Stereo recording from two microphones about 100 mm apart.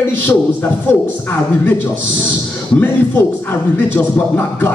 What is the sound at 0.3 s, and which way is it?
Speech, 20° left (ahead or behind).